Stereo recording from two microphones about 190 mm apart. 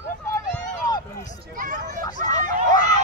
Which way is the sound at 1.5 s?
45° right (ahead or behind).